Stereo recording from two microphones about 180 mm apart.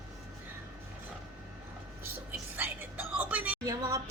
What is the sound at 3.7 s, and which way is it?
Speech, 20° right (ahead or behind).